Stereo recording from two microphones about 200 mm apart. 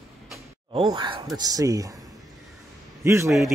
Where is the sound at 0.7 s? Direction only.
25° right (ahead or behind).